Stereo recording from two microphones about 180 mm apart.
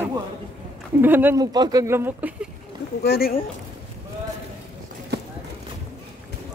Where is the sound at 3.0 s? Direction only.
60° left (ahead or behind).